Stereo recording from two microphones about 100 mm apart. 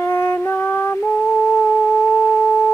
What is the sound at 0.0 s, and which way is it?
Music, 25° left (ahead or behind).